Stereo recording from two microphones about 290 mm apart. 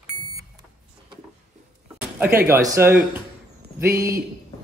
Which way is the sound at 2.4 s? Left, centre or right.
Centre.